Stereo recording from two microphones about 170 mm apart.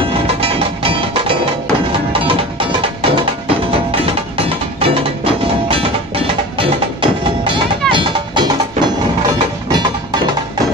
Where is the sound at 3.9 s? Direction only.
35° right (ahead or behind).